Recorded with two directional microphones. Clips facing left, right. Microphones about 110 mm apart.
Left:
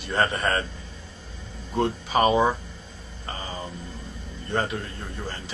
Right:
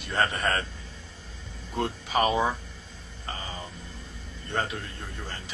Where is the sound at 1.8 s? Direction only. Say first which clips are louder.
Left 4 dB; 30° left (ahead or behind).